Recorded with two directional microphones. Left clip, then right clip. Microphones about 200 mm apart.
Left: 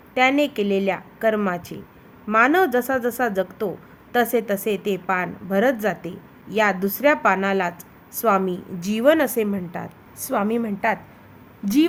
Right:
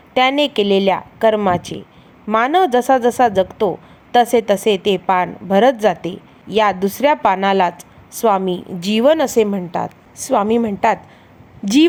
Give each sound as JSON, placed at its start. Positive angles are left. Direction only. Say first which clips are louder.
{"t": 0.1, "sound": "a woman's voice", "louder": "right 4 dB", "side_deg": -20}